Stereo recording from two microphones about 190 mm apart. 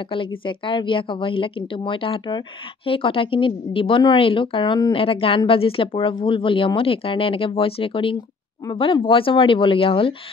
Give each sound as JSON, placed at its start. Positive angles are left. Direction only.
{"t": 0.1, "sound": "a woman's voice", "side_deg": 25}